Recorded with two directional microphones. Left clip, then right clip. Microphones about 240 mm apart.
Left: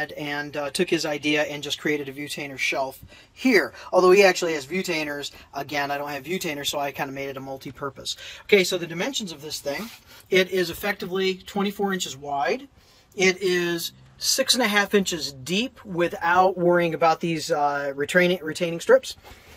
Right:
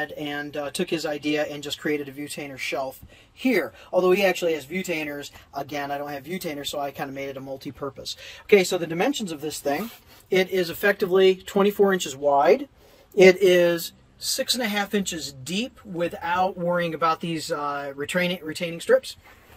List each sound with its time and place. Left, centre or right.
0.0 s speech: centre
10.9 s speech: centre
14.3 s speech: centre